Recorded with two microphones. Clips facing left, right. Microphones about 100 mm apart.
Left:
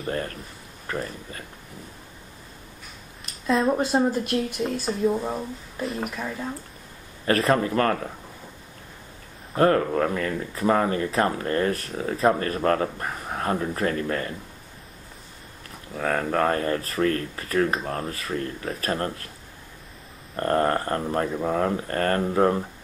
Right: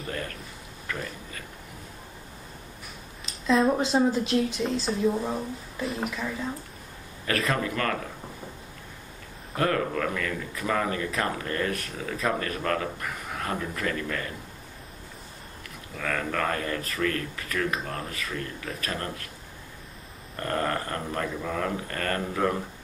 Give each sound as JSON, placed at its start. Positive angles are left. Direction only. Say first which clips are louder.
{"t": 0.0, "sound": "speech", "louder": "left 5 dB", "side_deg": 35}
{"t": 3.4, "sound": "speech", "louder": "even", "side_deg": 0}
{"t": 4.2, "sound": "speech", "louder": "right 1 dB", "side_deg": 55}
{"t": 4.6, "sound": "speech", "louder": "left 1 dB", "side_deg": 10}
{"t": 7.2, "sound": "speech", "louder": "left 6 dB", "side_deg": 35}
{"t": 9.6, "sound": "speech", "louder": "left 6 dB", "side_deg": 35}
{"t": 16.0, "sound": "speech", "louder": "left 6 dB", "side_deg": 35}
{"t": 20.3, "sound": "speech", "louder": "left 6 dB", "side_deg": 35}